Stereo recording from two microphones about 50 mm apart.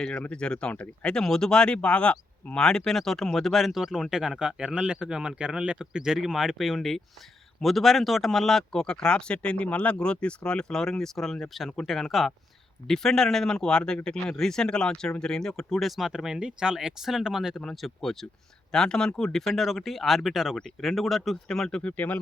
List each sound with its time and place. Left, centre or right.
0.2 s speech: left; by 17.6 s centre
17.6 s speech: centre
21.9 s speech: left